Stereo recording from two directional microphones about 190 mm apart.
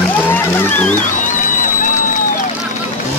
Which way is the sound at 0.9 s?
40° left (ahead or behind).